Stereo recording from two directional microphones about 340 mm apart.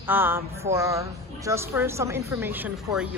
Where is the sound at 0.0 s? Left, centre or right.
Centre.